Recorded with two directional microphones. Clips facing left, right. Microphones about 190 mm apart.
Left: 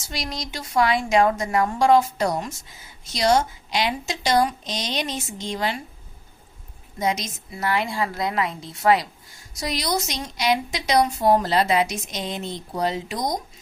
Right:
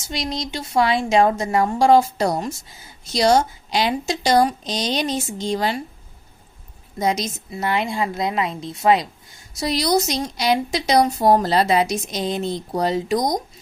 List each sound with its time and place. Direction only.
0.1 s a woman's voice: 25° right (ahead or behind)
7.0 s a woman's voice: 35° right (ahead or behind)
7.5 s a woman's voice: 20° right (ahead or behind)
9.6 s a woman's voice: 35° right (ahead or behind)